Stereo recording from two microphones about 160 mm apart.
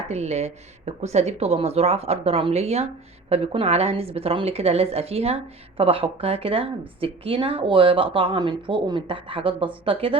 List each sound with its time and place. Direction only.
0.1 s a woman's voice: 45° right (ahead or behind)